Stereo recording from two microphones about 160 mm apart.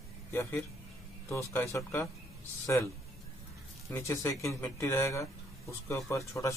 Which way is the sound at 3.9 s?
15° left (ahead or behind).